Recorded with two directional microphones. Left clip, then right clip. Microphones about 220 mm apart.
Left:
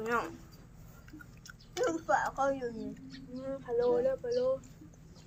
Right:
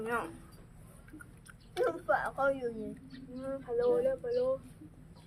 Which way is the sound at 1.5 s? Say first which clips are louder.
Right 1 dB; 5° left (ahead or behind).